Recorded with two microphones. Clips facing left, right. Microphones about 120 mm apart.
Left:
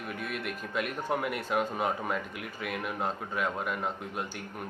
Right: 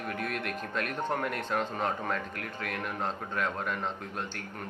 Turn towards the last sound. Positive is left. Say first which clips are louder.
# left 1 dB
turn(degrees=10)  # may be behind; listen again after turning